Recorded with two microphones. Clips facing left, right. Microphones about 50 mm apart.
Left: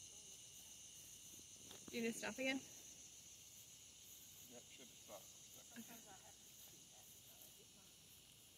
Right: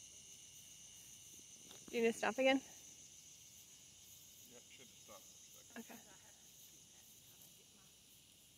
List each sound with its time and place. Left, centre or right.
1.9 s speech: right
5.7 s cricket: right